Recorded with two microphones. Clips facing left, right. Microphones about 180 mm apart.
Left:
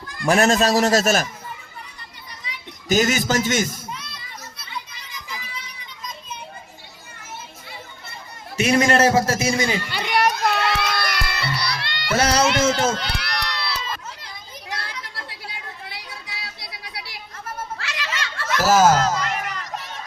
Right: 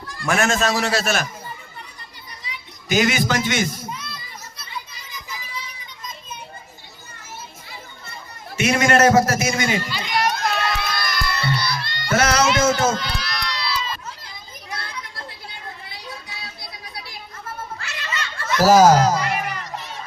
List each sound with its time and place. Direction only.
0.3 s a man's voice: 35° left (ahead or behind)
2.9 s a man's voice: 40° left (ahead or behind)
8.5 s a man's voice: 35° left (ahead or behind)
9.9 s music: 60° left (ahead or behind)
12.1 s a sound: 30° left (ahead or behind)
13.0 s crowd: 65° left (ahead or behind)
14.7 s a sound: 85° left
17.7 s children playing: 85° left
18.7 s a sound: 15° right (ahead or behind)